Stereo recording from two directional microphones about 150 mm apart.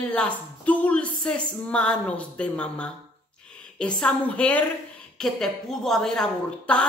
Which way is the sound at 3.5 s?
5° left (ahead or behind).